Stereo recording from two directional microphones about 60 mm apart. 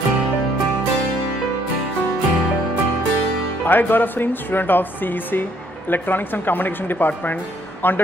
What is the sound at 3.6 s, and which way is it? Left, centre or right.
Speech, left.